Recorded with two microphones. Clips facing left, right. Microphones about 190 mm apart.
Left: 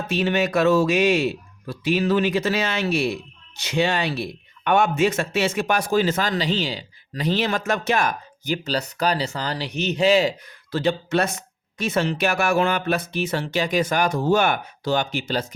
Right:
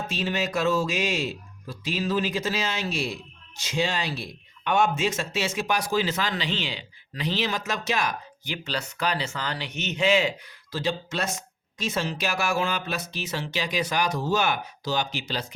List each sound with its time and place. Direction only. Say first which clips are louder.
0.1 s speech: left 8 dB; 65° left (ahead or behind); by 10.5 s 35° left (ahead or behind)
10.7 s speech: left 7 dB; 60° left (ahead or behind)